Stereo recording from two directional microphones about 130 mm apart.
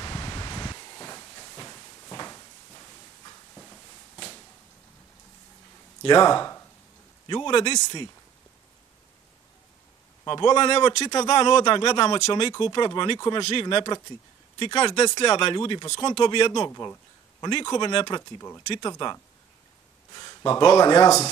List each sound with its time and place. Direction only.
0.0 s a sound: 30° left (ahead or behind)
6.0 s speech: 30° left (ahead or behind)
10.2 s speech: 35° left (ahead or behind)
11.1 s speech: 30° left (ahead or behind)
16.6 s speech: 20° left (ahead or behind)